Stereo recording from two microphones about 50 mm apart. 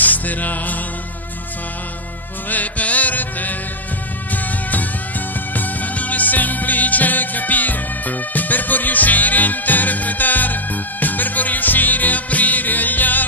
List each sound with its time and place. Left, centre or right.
0.0 s music: left
2.5 s music: left